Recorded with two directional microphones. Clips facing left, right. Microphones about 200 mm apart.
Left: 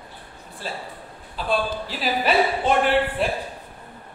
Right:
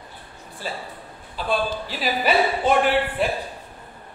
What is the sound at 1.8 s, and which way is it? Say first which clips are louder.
A woman's voice: even; 5° right (ahead or behind).